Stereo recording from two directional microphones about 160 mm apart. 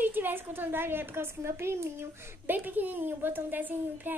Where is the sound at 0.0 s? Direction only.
10° right (ahead or behind).